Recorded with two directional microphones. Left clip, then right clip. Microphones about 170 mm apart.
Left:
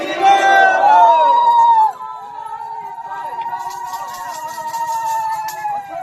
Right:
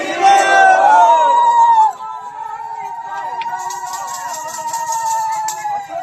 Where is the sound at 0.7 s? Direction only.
65° right (ahead or behind).